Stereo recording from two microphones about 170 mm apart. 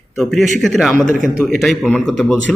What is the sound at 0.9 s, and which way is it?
Speech, 50° right (ahead or behind).